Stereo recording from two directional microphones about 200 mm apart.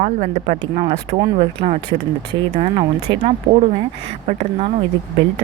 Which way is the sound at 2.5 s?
30° right (ahead or behind).